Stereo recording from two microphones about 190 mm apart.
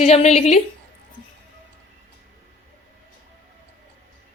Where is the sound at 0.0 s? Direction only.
35° left (ahead or behind).